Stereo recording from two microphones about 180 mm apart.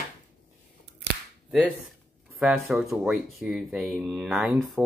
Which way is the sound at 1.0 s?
70° right (ahead or behind).